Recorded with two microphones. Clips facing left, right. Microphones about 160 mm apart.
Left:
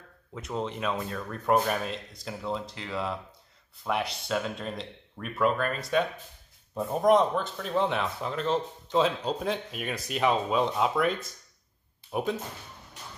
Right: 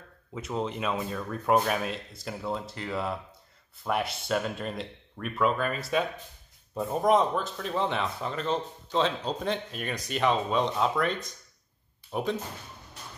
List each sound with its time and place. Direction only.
0.3 s speech: centre (ahead or behind)